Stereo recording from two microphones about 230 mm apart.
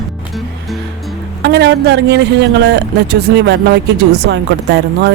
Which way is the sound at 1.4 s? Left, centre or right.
Right.